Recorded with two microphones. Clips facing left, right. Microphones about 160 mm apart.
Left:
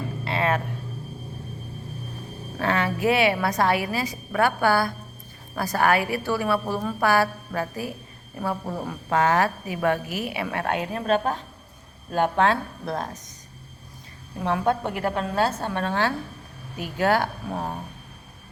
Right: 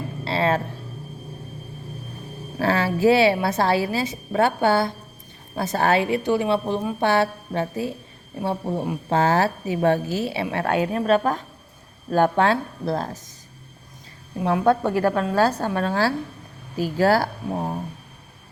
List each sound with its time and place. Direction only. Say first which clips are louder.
0.3 s a sound: right 3 dB; 30° right (ahead or behind)
2.6 s a woman's voice: right 4 dB; 30° right (ahead or behind)
15.0 s a woman's voice: right 3 dB; 25° left (ahead or behind)
15.4 s a woman's voice: right 4 dB; 35° right (ahead or behind)